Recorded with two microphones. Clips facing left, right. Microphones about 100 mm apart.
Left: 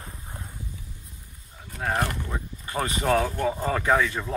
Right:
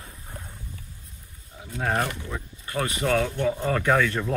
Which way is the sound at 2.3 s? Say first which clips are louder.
Even; 25° left (ahead or behind).